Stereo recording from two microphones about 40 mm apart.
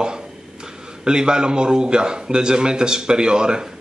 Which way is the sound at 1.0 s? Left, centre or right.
Right.